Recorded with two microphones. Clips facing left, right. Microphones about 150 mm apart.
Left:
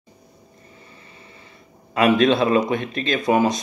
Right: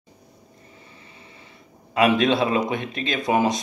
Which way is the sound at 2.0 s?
20° right (ahead or behind).